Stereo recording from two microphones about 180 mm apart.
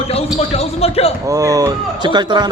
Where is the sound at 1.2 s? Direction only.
20° right (ahead or behind).